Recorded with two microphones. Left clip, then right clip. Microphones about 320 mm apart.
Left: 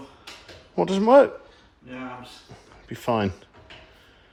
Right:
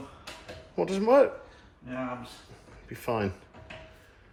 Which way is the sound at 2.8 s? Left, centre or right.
Left.